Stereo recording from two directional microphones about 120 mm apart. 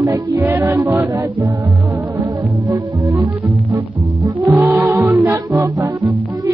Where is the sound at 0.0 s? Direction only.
20° right (ahead or behind).